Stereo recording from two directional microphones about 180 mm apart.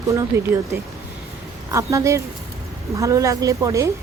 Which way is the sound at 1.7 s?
15° right (ahead or behind).